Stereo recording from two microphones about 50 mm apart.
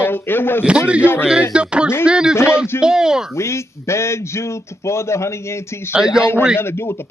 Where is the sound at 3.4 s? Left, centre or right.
Left.